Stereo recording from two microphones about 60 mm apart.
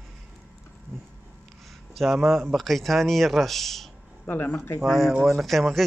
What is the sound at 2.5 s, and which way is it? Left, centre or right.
Speech, centre.